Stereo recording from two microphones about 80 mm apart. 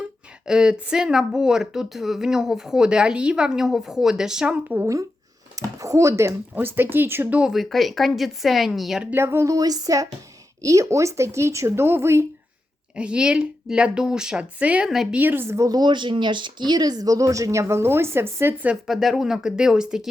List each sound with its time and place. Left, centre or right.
0.4 s speech: centre
5.5 s a sound: right
6.5 s speech: right
7.5 s speech: centre
9.1 s speech: right
9.5 s speech: right
13.0 s speech: centre
15.5 s speech: right
15.8 s speech: right
18.9 s speech: centre